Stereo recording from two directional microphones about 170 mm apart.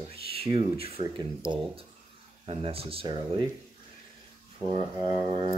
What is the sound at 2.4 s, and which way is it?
Speech, 35° right (ahead or behind).